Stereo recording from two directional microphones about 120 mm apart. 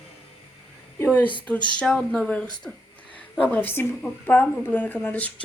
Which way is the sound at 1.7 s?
10° left (ahead or behind).